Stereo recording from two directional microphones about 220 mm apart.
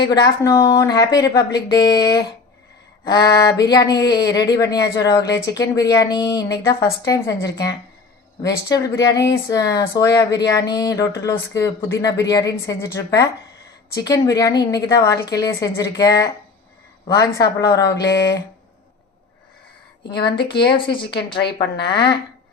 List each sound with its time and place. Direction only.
0.4 s speech: 15° left (ahead or behind)
20.7 s speech: 20° left (ahead or behind)